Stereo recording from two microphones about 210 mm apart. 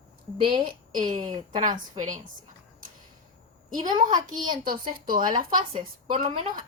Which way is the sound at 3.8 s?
20° right (ahead or behind).